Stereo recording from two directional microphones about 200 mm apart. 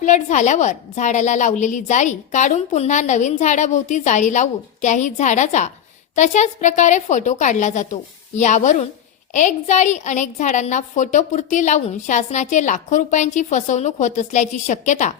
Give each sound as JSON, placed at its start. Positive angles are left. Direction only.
{"t": 0.0, "sound": "a woman's voice", "side_deg": 35}